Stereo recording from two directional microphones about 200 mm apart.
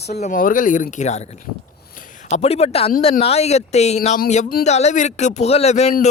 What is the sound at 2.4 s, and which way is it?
A man's voice, 30° left (ahead or behind).